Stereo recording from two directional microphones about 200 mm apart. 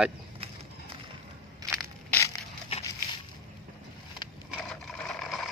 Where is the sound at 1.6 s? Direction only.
Centre (ahead or behind).